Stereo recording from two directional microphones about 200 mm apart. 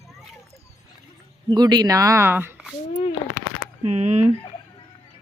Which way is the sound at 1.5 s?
20° right (ahead or behind).